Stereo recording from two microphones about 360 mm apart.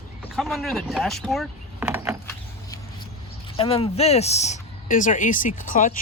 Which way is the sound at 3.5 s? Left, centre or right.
Centre.